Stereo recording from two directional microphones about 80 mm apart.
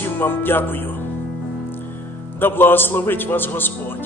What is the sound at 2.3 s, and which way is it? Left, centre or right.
A man's voice, left.